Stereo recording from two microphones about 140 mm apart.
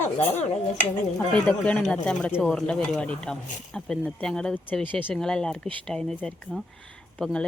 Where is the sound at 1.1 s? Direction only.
10° left (ahead or behind).